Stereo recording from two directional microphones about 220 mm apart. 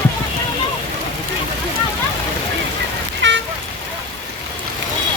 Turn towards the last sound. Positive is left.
turn(degrees=-55)  # may be behind; listen again after turning